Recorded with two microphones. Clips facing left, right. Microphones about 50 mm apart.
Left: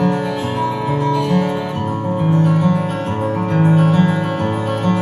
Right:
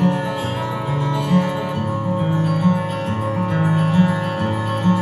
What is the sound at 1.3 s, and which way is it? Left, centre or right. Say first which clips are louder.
Music: left 2 dB; left.